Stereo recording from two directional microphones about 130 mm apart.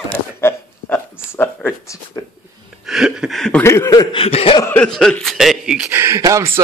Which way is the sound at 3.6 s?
20° left (ahead or behind).